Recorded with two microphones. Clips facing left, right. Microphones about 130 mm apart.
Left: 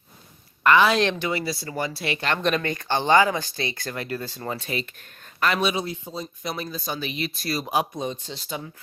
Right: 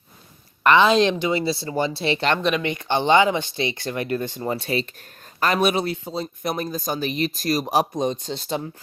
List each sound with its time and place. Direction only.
0.6 s speech: 20° right (ahead or behind)
2.4 s speech: 5° right (ahead or behind)
2.6 s speech: 20° right (ahead or behind); by 5.7 s 40° right (ahead or behind)
5.7 s speech: 70° right (ahead or behind); by 8.6 s 40° right (ahead or behind)